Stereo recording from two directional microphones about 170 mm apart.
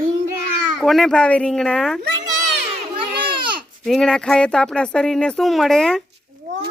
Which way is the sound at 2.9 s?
30° right (ahead or behind).